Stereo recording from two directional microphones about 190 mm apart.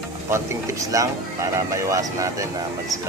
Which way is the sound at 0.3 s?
15° right (ahead or behind).